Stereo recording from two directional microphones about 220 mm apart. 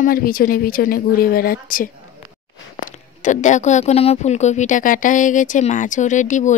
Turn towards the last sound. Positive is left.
turn(degrees=35)  # may be behind; listen again after turning